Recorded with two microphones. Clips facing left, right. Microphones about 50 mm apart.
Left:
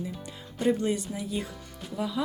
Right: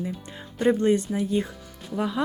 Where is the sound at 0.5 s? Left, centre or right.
Right.